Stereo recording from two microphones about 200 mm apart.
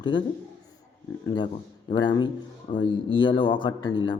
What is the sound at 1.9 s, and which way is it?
A man's voice, 25° left (ahead or behind).